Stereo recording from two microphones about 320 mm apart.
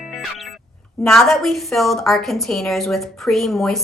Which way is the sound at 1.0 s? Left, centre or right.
Centre.